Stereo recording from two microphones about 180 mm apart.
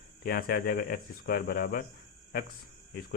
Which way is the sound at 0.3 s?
55° left (ahead or behind).